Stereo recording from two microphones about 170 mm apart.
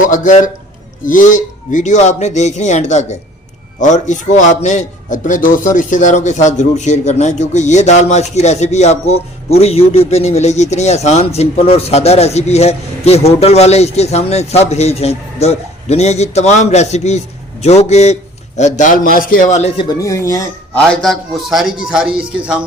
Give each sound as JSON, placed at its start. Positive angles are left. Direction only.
{"t": 0.1, "sound": "a man's voice", "side_deg": 50}
{"t": 20.7, "sound": "a man's voice", "side_deg": 5}